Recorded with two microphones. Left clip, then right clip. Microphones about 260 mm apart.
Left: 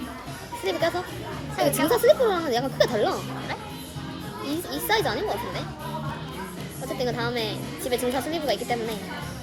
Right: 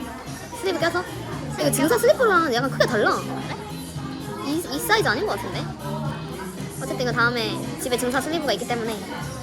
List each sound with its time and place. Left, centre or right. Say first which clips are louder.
0.6 s a woman's voice: right 2 dB; centre
4.4 s speech: right 4 dB; centre
7.0 s a woman's voice: right 5 dB; centre